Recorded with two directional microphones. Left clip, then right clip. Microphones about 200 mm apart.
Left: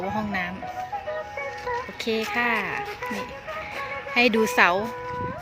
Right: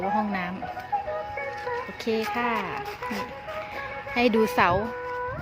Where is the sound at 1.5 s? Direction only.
40° right (ahead or behind).